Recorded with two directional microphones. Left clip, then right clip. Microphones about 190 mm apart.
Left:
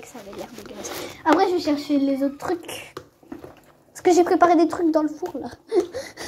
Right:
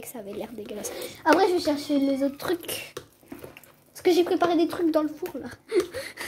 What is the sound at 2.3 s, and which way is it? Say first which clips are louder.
Speech: left 2 dB; 35° right (ahead or behind).